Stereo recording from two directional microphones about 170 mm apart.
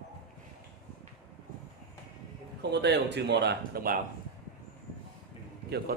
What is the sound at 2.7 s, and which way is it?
Speech, 85° right.